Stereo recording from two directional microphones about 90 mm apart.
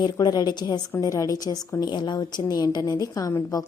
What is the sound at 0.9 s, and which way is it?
A woman's voice, 40° left (ahead or behind).